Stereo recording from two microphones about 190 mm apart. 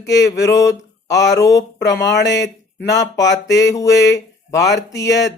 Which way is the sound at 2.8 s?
15° left (ahead or behind).